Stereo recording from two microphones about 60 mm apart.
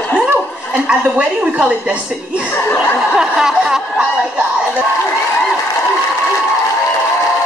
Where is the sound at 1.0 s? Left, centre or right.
Right.